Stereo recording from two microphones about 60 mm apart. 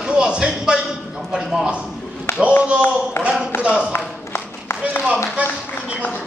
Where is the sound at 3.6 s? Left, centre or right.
Centre.